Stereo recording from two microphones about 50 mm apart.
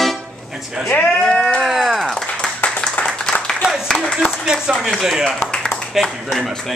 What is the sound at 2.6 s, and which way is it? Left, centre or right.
Clapping, left.